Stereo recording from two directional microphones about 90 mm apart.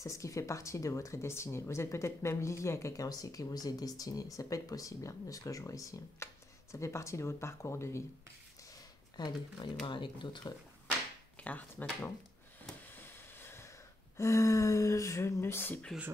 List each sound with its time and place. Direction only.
0.0 s speech: 35° left (ahead or behind)
3.1 s speech: 40° left (ahead or behind)
9.1 s speech: 55° left (ahead or behind)
11.4 s speech: 20° left (ahead or behind)
12.9 s a sound: 25° left (ahead or behind)
14.1 s speech: 35° left (ahead or behind)